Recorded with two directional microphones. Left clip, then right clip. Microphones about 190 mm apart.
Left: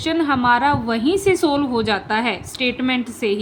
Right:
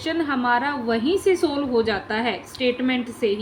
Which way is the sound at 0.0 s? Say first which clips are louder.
Left 5 dB; 30° left (ahead or behind).